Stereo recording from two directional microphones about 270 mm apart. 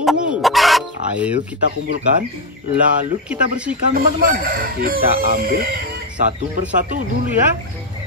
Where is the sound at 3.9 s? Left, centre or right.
Right.